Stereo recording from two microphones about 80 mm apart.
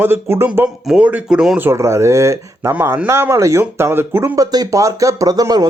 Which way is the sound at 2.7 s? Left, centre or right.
Right.